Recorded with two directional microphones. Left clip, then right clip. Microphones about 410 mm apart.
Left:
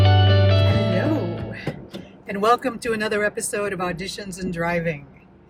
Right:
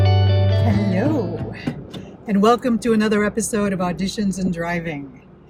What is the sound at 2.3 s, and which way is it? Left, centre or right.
Speech, centre.